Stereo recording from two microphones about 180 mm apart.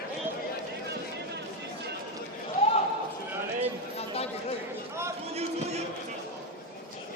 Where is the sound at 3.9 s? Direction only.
35° left (ahead or behind).